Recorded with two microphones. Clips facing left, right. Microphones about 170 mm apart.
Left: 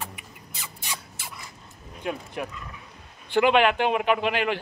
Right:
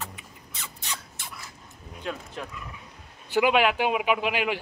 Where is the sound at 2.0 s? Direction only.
15° left (ahead or behind).